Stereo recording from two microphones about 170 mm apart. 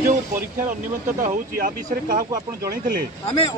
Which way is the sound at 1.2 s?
55° right (ahead or behind).